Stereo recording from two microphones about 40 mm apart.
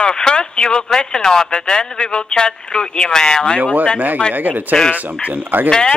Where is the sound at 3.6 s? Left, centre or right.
Right.